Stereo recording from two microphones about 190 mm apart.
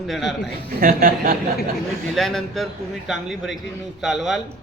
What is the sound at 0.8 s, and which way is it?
Speech, 50° right (ahead or behind).